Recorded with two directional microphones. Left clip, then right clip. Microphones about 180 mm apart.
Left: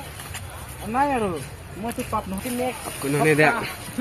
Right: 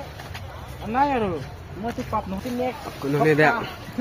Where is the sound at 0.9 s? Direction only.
20° left (ahead or behind).